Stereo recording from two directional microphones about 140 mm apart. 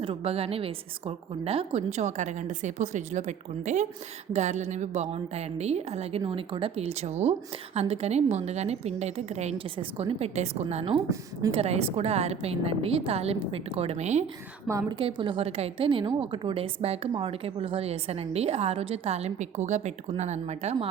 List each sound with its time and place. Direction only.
0.0 s a woman's voice: 45° right (ahead or behind)
14.7 s a woman's voice: 25° right (ahead or behind)
14.9 s a woman's voice: 35° right (ahead or behind); by 20.7 s 55° right (ahead or behind)